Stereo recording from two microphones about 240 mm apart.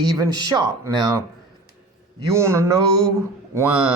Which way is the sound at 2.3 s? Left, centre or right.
Centre.